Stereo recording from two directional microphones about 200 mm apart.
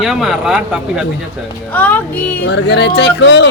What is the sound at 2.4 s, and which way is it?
Speech, 60° left (ahead or behind).